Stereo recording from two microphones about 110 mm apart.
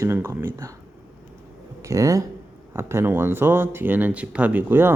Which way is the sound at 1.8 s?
30° right (ahead or behind).